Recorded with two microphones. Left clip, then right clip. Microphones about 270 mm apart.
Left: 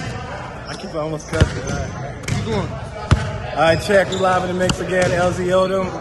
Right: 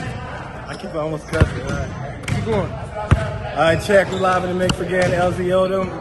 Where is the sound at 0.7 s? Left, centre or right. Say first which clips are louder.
Right 1 dB; centre.